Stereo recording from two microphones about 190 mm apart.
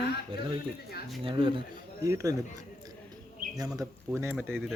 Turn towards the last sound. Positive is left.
turn(degrees=0)  # may be behind; listen again after turning